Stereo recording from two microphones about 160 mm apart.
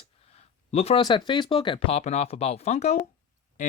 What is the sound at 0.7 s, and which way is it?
Speech, 40° left (ahead or behind).